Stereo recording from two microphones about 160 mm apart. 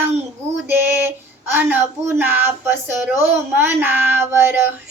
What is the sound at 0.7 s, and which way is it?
Female singing, 15° right (ahead or behind).